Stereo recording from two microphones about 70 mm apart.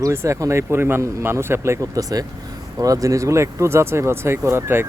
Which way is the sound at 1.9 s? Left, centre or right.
Right.